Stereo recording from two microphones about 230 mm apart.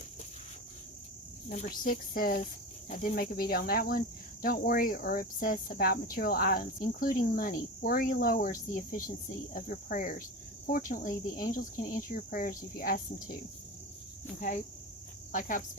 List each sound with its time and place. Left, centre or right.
1.5 s speech: left
15.3 s speech: left